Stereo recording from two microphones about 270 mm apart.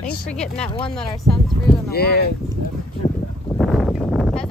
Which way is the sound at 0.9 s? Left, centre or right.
Centre.